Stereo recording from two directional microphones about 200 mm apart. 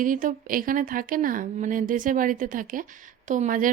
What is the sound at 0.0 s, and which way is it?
A woman's voice, 40° right (ahead or behind).